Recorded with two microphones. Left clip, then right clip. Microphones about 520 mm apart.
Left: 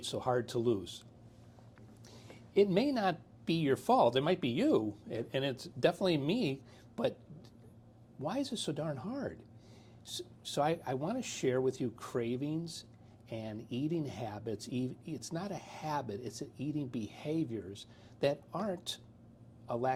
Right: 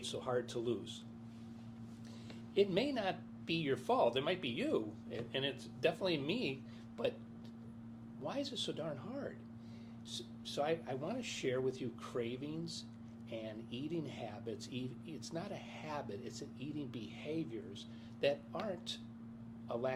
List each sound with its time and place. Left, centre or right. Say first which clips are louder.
0.0 s a woman's voice: left 5 dB; left
2.6 s a woman's voice: left 5 dB; left
8.2 s speech: left 4 dB; left
10.1 s speech: left 4 dB; left
13.3 s speech: left 4 dB; left
19.6 s a man's voice: left 4 dB; left